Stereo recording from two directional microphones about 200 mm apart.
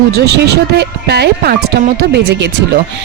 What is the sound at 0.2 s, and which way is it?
Speech, 55° right (ahead or behind).